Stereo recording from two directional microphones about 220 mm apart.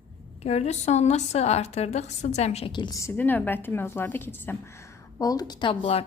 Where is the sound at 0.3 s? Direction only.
30° left (ahead or behind).